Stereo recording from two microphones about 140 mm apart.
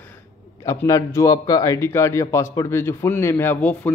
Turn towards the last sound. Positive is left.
turn(degrees=10)  # may be behind; listen again after turning